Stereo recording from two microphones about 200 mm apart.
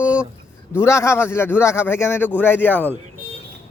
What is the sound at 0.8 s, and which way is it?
A man's voice, 15° left (ahead or behind).